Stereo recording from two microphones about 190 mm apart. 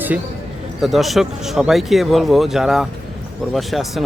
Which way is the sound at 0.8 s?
Centre (ahead or behind).